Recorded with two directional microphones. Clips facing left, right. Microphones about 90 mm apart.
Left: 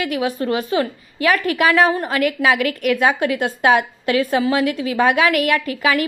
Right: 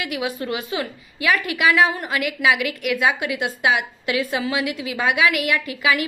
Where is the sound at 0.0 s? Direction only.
40° left (ahead or behind).